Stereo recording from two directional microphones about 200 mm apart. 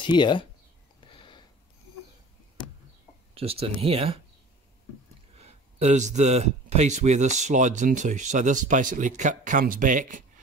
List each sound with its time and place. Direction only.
0.0 s speech: 25° left (ahead or behind)
1.0 s sniff: 25° left (ahead or behind)
3.3 s speech: 30° right (ahead or behind)
5.4 s speech: 35° right (ahead or behind)